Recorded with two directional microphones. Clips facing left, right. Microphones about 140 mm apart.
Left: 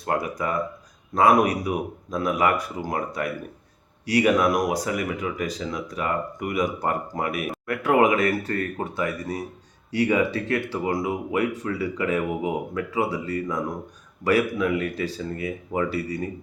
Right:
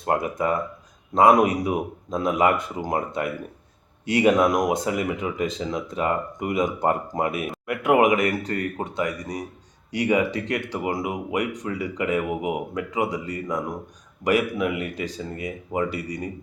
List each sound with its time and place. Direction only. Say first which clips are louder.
0.0 s speech: right 2 dB; 25° right (ahead or behind)